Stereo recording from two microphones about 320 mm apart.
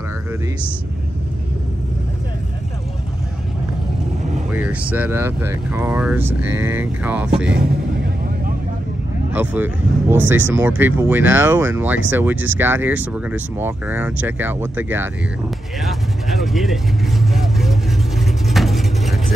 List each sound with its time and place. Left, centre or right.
4.5 s speech: centre
7.5 s vehicle: right
9.3 s speech: centre
15.8 s vehicle: centre